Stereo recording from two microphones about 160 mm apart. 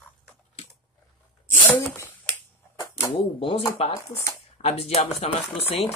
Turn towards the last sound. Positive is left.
turn(degrees=40)  # may be behind; listen again after turning